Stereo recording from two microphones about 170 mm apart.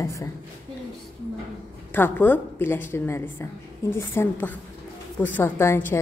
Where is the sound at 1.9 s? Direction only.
10° left (ahead or behind).